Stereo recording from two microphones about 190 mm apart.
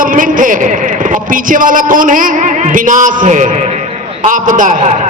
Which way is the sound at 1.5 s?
45° right (ahead or behind).